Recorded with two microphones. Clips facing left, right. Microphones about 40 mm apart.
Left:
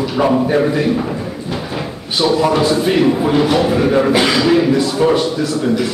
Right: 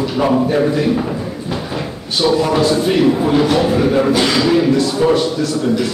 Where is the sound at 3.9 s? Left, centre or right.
Left.